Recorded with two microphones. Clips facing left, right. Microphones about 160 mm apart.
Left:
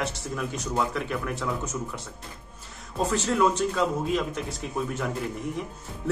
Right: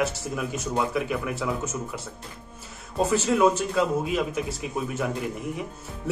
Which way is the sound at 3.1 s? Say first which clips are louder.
Right 3 dB; 5° right (ahead or behind).